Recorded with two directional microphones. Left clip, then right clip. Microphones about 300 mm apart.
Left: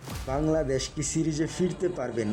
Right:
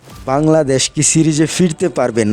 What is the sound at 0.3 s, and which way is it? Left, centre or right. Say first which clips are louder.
Speech: right 14 dB; right.